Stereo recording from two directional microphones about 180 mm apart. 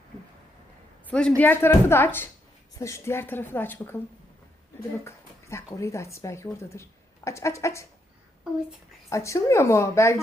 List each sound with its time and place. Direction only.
1.0 s a man's voice: 5° left (ahead or behind)
5.0 s speech: 15° left (ahead or behind)
9.0 s speech: 15° left (ahead or behind)